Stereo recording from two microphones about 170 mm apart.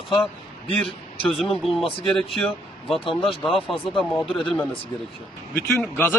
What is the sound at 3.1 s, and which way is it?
Speech, 30° left (ahead or behind).